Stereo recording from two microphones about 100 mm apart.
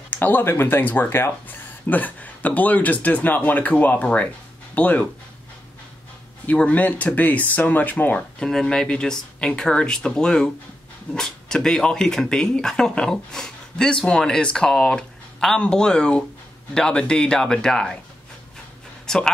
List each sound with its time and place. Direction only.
0.1 s speech: 20° left (ahead or behind)
6.4 s speech: 15° left (ahead or behind)
19.0 s a man's voice: 5° left (ahead or behind)